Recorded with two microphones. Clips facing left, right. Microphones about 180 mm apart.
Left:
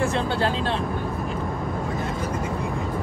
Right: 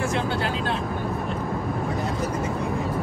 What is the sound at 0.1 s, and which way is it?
Speech, 30° left (ahead or behind).